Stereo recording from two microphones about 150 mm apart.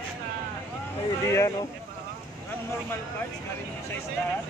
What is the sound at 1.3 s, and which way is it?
Speech, 20° left (ahead or behind).